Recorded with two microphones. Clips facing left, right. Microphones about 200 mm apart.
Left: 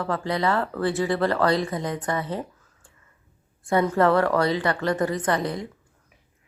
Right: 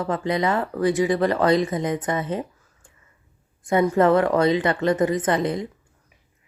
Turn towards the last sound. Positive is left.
turn(degrees=-20)  # may be behind; listen again after turning